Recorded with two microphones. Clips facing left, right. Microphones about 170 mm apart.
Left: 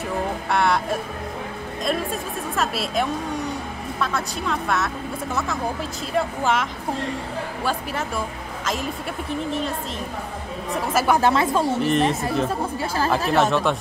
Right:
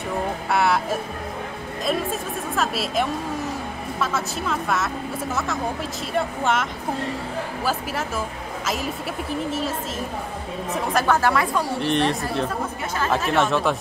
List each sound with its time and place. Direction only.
0.5 s a woman's voice: 5° right (ahead or behind)
9.5 s a woman's voice: 5° right (ahead or behind)
11.1 s a woman's voice: 25° left (ahead or behind)
11.8 s a woman's voice: centre (ahead or behind)
12.4 s speech: 30° left (ahead or behind)
13.3 s a woman's voice: centre (ahead or behind)